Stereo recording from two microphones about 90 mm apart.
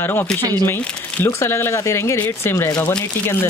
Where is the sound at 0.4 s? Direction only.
45° right (ahead or behind).